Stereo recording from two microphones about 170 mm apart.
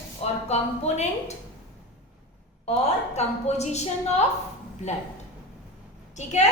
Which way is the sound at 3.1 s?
40° left (ahead or behind).